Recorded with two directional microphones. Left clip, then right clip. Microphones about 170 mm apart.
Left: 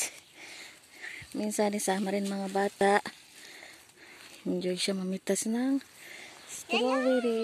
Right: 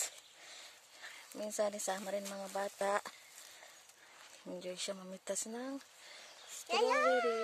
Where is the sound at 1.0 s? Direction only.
Centre (ahead or behind).